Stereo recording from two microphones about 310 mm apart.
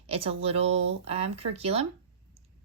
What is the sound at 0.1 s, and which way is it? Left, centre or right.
A woman's voice, centre.